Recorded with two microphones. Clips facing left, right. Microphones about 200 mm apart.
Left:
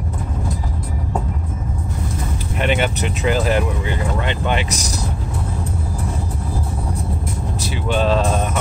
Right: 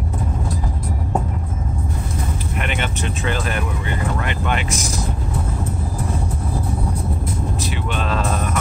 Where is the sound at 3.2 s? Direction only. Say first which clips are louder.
Left 7 dB; 25° left (ahead or behind).